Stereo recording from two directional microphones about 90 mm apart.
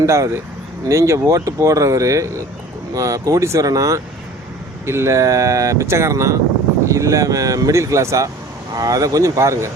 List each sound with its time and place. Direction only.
0.0 s speech: 35° right (ahead or behind)